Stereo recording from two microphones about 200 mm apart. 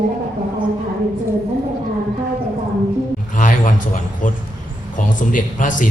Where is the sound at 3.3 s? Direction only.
40° left (ahead or behind).